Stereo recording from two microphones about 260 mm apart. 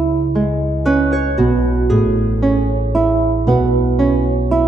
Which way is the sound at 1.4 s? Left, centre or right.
Centre.